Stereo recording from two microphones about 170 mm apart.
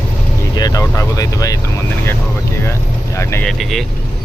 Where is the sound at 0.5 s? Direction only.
20° left (ahead or behind).